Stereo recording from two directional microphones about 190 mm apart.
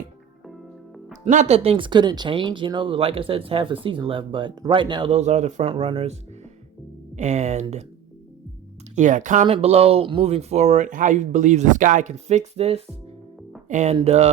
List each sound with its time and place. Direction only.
0.4 s music: centre (ahead or behind)
1.2 s speech: 35° right (ahead or behind)
7.2 s speech: 35° right (ahead or behind)
9.0 s speech: 40° right (ahead or behind)